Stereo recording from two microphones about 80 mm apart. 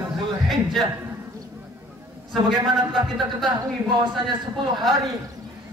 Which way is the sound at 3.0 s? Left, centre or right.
Right.